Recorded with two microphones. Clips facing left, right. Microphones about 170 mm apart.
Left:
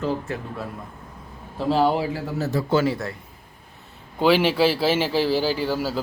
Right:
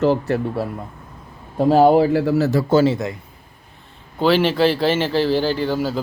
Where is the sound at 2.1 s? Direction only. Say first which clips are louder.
Right 9 dB; 75° right (ahead or behind).